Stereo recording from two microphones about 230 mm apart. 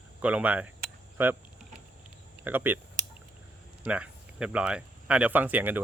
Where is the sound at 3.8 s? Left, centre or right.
Centre.